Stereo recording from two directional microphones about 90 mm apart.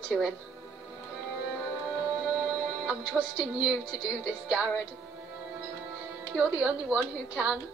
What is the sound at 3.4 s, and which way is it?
Speech, 10° right (ahead or behind).